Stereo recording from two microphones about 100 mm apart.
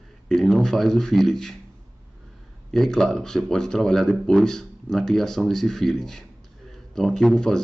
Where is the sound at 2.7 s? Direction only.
5° left (ahead or behind).